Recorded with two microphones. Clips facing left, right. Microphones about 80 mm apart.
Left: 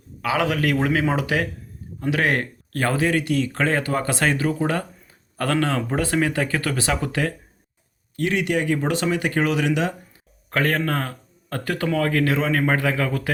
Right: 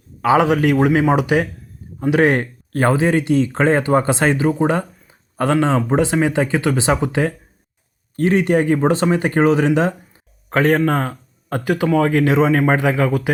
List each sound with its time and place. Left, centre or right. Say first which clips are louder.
0.2 s speech: right 8 dB; right
8.1 s speech: right 7 dB; right
10.5 s speech: right 7 dB; right